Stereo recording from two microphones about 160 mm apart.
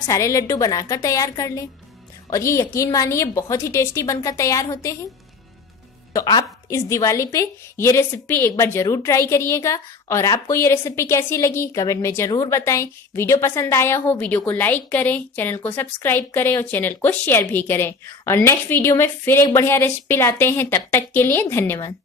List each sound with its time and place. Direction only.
0.0 s a woman's voice: 20° left (ahead or behind)
6.1 s a woman's voice: 25° left (ahead or behind)